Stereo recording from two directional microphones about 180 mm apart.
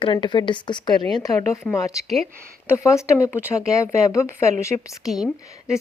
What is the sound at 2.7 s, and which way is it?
A woman's voice, 15° left (ahead or behind).